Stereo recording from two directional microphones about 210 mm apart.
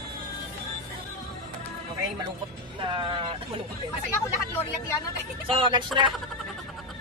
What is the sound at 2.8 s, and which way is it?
Speech, 25° right (ahead or behind).